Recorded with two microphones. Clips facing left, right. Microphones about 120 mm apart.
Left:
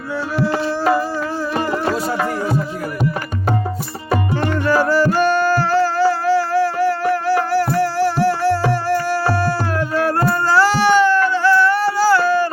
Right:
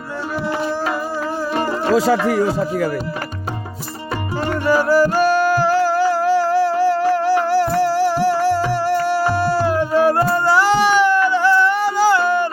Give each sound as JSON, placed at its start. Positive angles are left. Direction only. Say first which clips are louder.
{"t": 2.0, "sound": "speech", "louder": "right 5 dB", "side_deg": -90}
{"t": 4.6, "sound": "music", "louder": "right 2 dB", "side_deg": -10}